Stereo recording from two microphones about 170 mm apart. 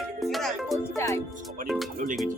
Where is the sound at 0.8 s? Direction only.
15° left (ahead or behind).